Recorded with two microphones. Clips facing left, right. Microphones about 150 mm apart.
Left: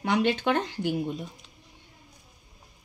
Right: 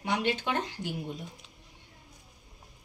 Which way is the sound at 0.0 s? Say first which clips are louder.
Left 5 dB; 70° left (ahead or behind).